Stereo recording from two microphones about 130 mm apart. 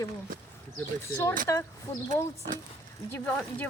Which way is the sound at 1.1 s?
20° left (ahead or behind).